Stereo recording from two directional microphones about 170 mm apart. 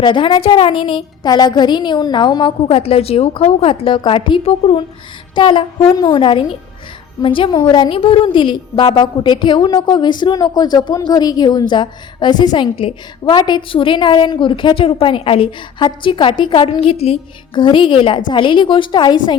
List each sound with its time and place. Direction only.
0.0 s a woman's voice: 30° left (ahead or behind)